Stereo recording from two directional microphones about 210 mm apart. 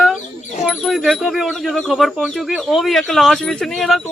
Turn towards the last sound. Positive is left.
turn(degrees=0)  # may be behind; listen again after turning